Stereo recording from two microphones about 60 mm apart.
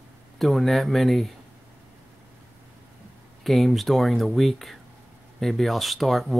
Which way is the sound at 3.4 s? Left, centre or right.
Centre.